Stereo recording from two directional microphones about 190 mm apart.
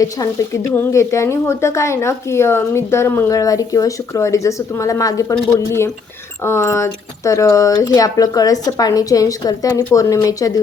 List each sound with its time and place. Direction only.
0.0 s speech: 15° left (ahead or behind)